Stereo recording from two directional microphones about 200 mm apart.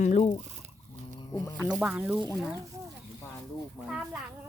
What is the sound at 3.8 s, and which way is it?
Speech, 5° right (ahead or behind).